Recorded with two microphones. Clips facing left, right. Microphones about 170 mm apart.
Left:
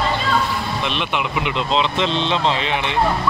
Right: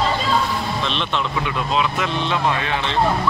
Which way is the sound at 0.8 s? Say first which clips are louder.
Left 1 dB; 10° left (ahead or behind).